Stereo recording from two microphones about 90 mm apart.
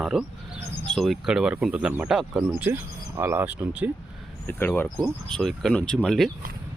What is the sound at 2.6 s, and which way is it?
Speech, 20° right (ahead or behind).